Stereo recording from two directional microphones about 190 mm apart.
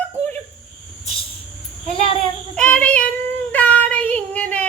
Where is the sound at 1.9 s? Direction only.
30° left (ahead or behind).